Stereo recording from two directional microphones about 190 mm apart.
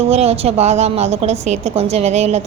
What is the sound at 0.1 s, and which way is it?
A woman's voice, 35° right (ahead or behind).